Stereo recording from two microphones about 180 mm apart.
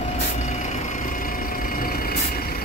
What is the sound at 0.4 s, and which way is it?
Vehicle, 40° left (ahead or behind).